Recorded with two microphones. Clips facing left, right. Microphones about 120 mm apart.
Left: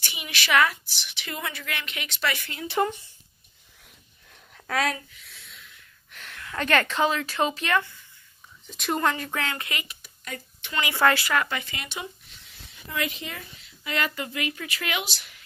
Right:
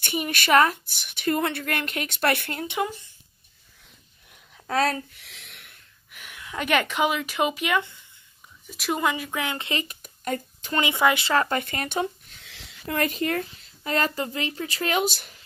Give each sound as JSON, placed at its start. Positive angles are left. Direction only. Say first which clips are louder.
{"t": 0.0, "sound": "a woman's voice", "louder": "right 7 dB", "side_deg": -50}
{"t": 4.6, "sound": "speech", "louder": "right 3 dB", "side_deg": -35}
{"t": 5.2, "sound": "a sound", "louder": "right 1 dB", "side_deg": -85}
{"t": 6.1, "sound": "speech", "louder": "even", "side_deg": -10}
{"t": 9.8, "sound": "a sound", "louder": "right 10 dB", "side_deg": -45}
{"t": 10.8, "sound": "speech", "louder": "right 1 dB", "side_deg": -15}
{"t": 11.2, "sound": "speech", "louder": "right 4 dB", "side_deg": -35}
{"t": 11.6, "sound": "a woman's voice", "louder": "right 9 dB", "side_deg": -50}
{"t": 12.4, "sound": "a sound", "louder": "right 9 dB", "side_deg": -90}
{"t": 12.9, "sound": "a woman's voice", "louder": "right 7 dB", "side_deg": -45}